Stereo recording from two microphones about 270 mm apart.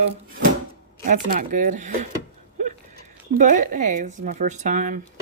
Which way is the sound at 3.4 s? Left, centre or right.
Right.